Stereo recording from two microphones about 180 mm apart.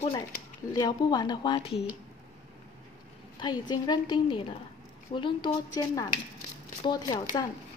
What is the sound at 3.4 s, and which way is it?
Speech, 25° left (ahead or behind).